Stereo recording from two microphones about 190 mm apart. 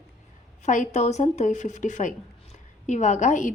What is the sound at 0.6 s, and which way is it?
A woman's voice, 40° left (ahead or behind).